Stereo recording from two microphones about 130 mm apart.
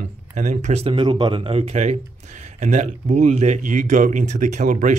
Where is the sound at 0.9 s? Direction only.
35° right (ahead or behind).